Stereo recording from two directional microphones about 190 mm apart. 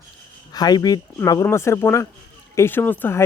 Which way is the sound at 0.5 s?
20° left (ahead or behind).